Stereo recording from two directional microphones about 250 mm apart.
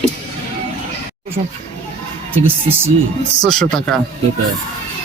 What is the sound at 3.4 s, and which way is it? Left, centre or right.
Speech, centre.